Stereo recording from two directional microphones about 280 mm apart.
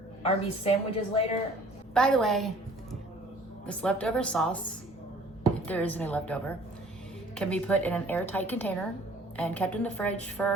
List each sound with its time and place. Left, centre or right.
0.2 s a woman's voice: left
1.9 s speech: centre
3.7 s speech: centre
5.6 s speech: centre